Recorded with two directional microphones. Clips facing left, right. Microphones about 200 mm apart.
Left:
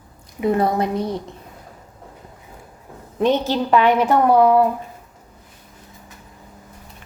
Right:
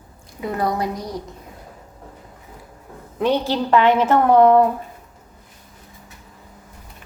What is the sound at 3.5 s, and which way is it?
A woman's voice, 15° left (ahead or behind).